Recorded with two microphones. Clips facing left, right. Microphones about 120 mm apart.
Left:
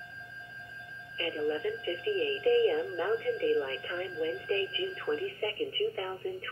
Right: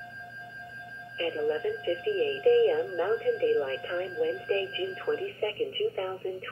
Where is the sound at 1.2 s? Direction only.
35° right (ahead or behind).